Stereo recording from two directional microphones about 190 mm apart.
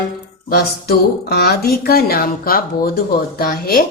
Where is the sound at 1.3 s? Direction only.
55° left (ahead or behind).